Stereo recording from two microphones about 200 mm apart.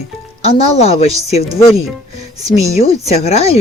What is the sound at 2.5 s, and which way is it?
Speech, 30° left (ahead or behind).